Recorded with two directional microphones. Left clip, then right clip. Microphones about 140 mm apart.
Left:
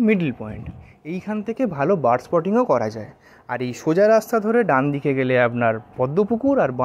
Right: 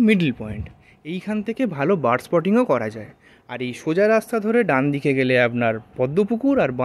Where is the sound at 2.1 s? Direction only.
35° right (ahead or behind).